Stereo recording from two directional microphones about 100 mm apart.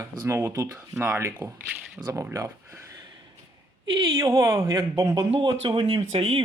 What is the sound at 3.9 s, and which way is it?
Speech, 55° right (ahead or behind).